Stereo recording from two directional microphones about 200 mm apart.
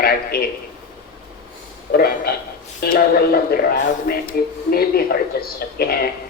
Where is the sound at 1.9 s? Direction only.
50° left (ahead or behind).